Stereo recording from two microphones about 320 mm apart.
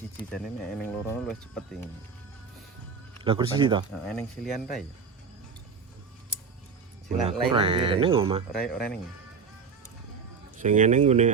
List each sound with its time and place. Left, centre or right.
0.3 s speech: centre
3.2 s speech: centre
4.1 s speech: centre
7.2 s speech: centre
8.6 s speech: centre
10.6 s speech: right